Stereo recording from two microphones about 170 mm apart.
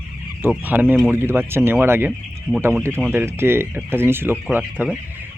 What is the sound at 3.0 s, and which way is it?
Speech, 10° right (ahead or behind).